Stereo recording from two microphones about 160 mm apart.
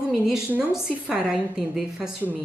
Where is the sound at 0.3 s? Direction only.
5° right (ahead or behind).